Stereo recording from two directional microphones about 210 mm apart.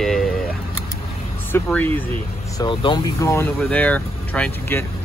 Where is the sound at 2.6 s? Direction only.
25° left (ahead or behind).